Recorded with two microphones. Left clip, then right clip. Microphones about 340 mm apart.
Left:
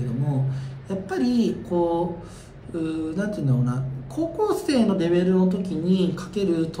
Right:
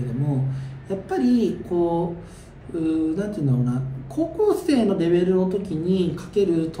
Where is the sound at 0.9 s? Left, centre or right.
Centre.